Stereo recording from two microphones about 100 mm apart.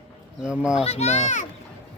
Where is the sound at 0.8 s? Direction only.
90° left.